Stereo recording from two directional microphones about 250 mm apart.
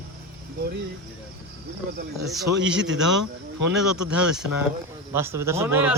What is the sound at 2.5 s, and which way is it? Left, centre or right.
A man's voice, right.